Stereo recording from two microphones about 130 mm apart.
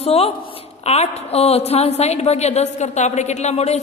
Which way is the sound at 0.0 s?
50° left (ahead or behind).